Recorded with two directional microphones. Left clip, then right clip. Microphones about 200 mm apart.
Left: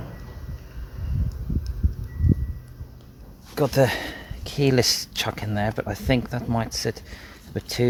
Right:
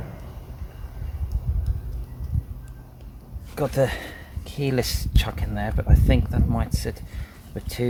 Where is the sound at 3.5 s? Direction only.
45° left (ahead or behind).